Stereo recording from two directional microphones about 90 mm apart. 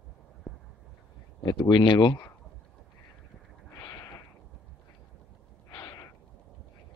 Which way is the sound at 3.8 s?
45° left (ahead or behind).